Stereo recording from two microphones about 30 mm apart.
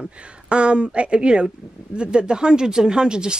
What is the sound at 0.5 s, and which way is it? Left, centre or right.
Speech, right.